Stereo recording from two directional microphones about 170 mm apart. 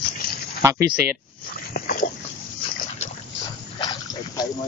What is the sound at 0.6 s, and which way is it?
Speech, 15° right (ahead or behind).